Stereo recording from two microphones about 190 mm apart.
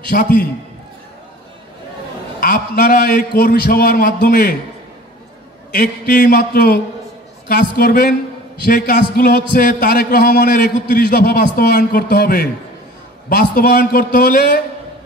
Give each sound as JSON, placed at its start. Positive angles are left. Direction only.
{"t": 0.1, "sound": "a man's voice", "side_deg": 45}
{"t": 2.4, "sound": "a man's voice", "side_deg": 55}
{"t": 5.7, "sound": "a man's voice", "side_deg": 50}